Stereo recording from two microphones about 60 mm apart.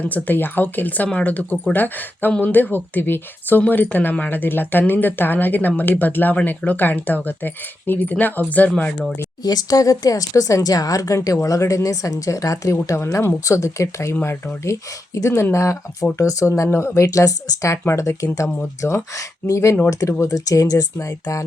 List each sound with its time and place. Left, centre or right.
0.0 s speech: left
9.4 s speech: left
13.0 s speech: left
16.7 s speech: left
17.8 s speech: left